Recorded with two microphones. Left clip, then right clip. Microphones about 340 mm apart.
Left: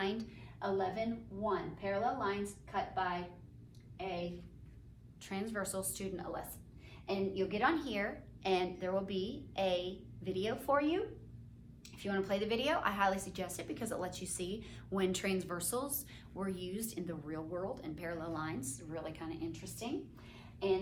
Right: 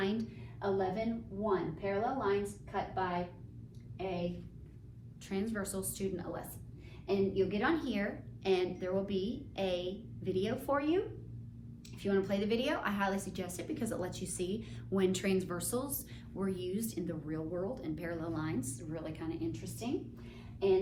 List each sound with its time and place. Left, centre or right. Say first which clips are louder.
0.0 s a sound: right 2 dB; centre
1.5 s a woman's voice: right 2 dB; centre
5.3 s a woman's voice: right 1 dB; centre